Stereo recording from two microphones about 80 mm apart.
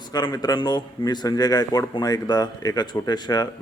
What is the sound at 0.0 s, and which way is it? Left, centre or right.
A man's voice, left.